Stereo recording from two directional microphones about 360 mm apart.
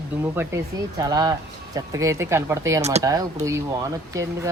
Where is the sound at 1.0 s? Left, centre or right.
Centre.